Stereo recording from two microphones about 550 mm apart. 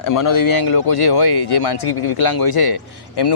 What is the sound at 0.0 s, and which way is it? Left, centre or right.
A man's voice, left.